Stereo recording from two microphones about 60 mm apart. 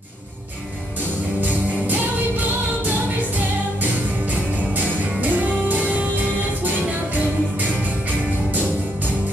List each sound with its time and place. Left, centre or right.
5.2 s music: right